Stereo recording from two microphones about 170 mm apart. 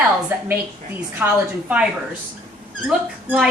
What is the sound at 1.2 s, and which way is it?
Speech, 10° right (ahead or behind).